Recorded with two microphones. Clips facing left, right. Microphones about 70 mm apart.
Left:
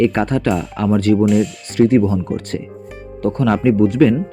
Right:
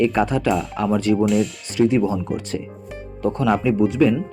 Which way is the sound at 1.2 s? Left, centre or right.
Centre.